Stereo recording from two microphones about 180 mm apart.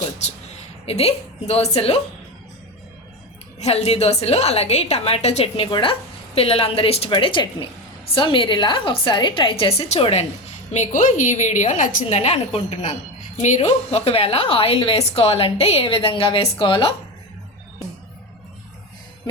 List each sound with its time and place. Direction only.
0.2 s a woman's voice: 40° left (ahead or behind)
3.6 s a woman's voice: 35° left (ahead or behind)